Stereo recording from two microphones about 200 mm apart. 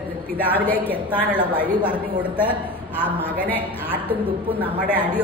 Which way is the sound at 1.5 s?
5° right (ahead or behind).